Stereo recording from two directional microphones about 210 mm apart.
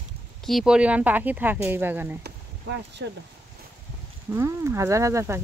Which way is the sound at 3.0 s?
60° right (ahead or behind).